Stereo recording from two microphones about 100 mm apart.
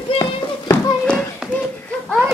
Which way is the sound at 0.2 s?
30° left (ahead or behind).